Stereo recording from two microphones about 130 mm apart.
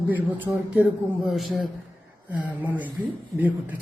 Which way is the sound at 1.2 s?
Centre (ahead or behind).